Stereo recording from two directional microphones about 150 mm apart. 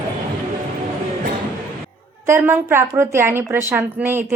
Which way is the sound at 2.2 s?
15° right (ahead or behind).